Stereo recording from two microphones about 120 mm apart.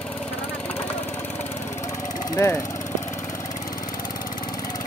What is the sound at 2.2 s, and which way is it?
Speech, 25° left (ahead or behind).